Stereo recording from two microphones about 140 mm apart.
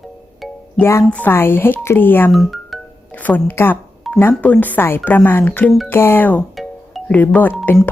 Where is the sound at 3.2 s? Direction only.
15° left (ahead or behind).